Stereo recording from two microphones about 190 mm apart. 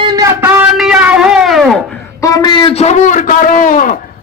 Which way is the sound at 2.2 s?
20° left (ahead or behind).